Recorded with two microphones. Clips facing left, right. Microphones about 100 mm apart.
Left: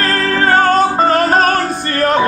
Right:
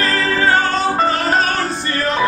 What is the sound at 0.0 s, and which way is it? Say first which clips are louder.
Music: left 2 dB; 50° left (ahead or behind).